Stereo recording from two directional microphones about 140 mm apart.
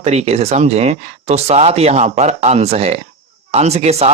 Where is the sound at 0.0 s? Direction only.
50° right (ahead or behind).